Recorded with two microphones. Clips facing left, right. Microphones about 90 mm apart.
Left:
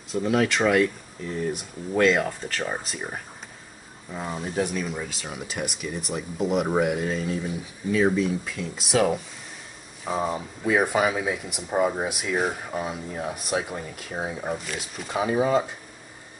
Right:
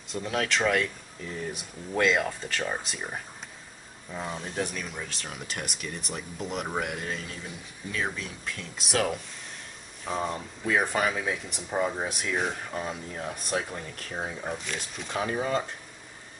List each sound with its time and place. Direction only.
0.1 s speech: 5° left (ahead or behind)